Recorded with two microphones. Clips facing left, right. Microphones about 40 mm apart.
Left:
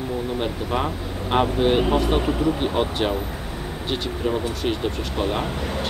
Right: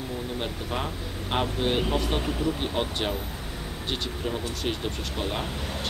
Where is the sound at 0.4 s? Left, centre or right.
Centre.